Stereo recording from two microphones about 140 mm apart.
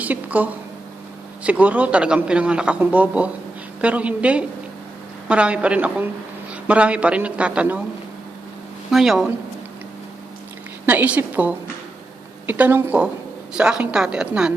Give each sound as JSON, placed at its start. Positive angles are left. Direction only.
{"t": 0.0, "sound": "a man's voice", "side_deg": -10}
{"t": 8.9, "sound": "a woman's voice", "side_deg": 0}
{"t": 10.8, "sound": "a man's voice", "side_deg": -10}